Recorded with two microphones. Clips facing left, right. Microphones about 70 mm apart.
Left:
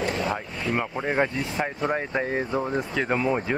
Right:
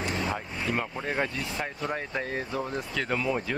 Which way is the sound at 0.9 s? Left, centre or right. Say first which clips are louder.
Left 5 dB; left.